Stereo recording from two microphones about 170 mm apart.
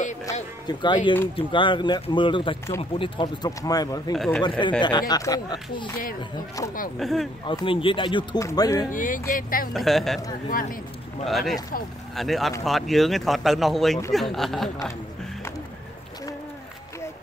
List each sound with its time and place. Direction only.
0.2 s speech: 20° left (ahead or behind)
4.1 s speech: 5° left (ahead or behind)
4.4 s speech: 30° left (ahead or behind)
7.0 s speech: centre (ahead or behind)
7.4 s speech: 30° left (ahead or behind)
8.4 s speech: 15° left (ahead or behind)
8.9 s speech: 50° left (ahead or behind)
9.8 s speech: centre (ahead or behind)
11.2 s speech: centre (ahead or behind)